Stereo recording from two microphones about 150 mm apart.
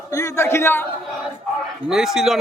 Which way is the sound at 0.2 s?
20° left (ahead or behind).